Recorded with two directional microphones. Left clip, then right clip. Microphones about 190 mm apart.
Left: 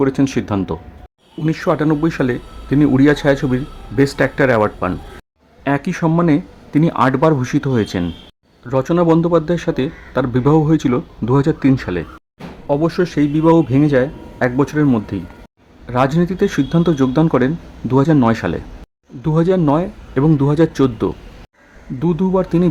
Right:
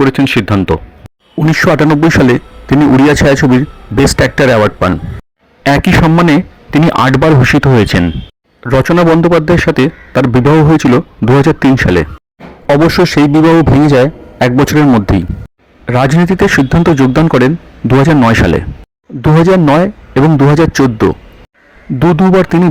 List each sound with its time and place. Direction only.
0.0 s a man's voice: 25° right (ahead or behind)